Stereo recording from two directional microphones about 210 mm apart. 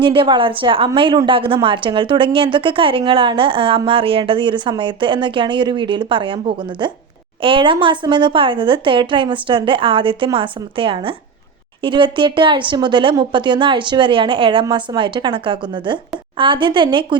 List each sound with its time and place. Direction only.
0.0 s a woman's voice: 25° right (ahead or behind)